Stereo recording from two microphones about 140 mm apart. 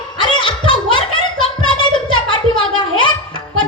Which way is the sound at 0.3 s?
35° left (ahead or behind).